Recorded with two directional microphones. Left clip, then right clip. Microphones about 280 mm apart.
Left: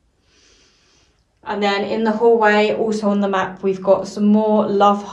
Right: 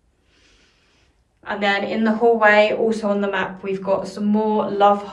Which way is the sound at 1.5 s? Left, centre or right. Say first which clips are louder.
Left 1 dB; centre.